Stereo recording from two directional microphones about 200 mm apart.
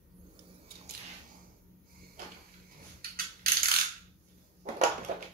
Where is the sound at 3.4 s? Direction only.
50° right (ahead or behind).